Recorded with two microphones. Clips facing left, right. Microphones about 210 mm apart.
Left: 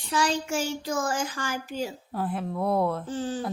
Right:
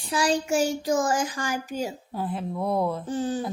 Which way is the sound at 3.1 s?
15° right (ahead or behind).